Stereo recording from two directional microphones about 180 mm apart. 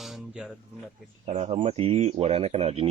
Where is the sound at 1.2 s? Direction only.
40° right (ahead or behind).